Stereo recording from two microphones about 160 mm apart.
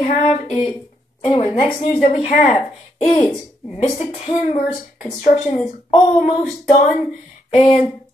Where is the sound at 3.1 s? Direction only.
30° left (ahead or behind).